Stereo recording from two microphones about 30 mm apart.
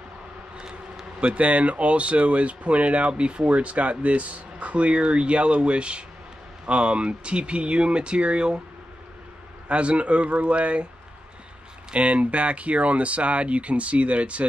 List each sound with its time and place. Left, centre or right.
0.6 s a sound: right
1.3 s speech: right
9.7 s speech: right
11.9 s speech: right